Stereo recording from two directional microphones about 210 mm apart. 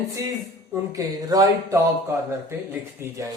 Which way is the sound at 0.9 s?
15° right (ahead or behind).